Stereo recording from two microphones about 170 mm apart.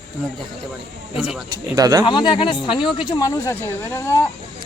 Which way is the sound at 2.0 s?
30° left (ahead or behind).